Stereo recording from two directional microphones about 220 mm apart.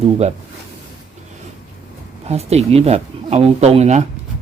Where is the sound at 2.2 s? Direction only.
30° right (ahead or behind).